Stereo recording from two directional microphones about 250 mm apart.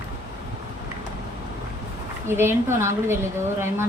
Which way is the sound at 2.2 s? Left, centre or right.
Centre.